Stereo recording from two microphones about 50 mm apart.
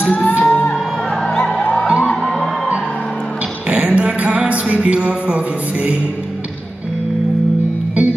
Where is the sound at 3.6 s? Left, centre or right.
Right.